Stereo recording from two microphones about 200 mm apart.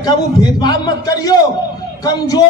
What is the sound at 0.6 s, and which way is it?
A man's voice, 20° left (ahead or behind).